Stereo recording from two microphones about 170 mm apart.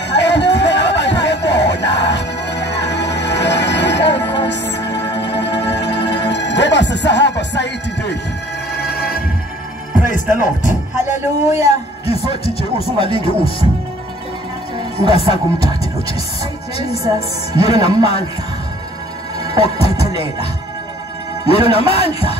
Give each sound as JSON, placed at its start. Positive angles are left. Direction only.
{"t": 0.1, "sound": "a sound", "side_deg": 90}
{"t": 8.7, "sound": "music", "side_deg": 65}
{"t": 9.9, "sound": "music", "side_deg": 50}
{"t": 10.4, "sound": "speech", "side_deg": 45}
{"t": 15.0, "sound": "speech", "side_deg": 35}
{"t": 17.5, "sound": "speech", "side_deg": 35}
{"t": 19.4, "sound": "music", "side_deg": 35}
{"t": 21.5, "sound": "speech", "side_deg": 35}